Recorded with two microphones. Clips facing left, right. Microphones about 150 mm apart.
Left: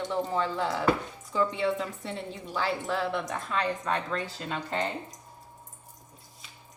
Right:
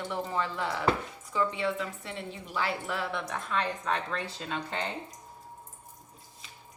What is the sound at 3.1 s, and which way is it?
Speech, centre (ahead or behind).